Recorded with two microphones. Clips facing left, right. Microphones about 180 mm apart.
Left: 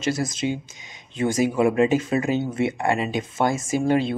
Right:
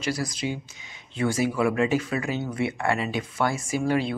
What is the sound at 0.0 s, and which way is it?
Speech, 20° left (ahead or behind).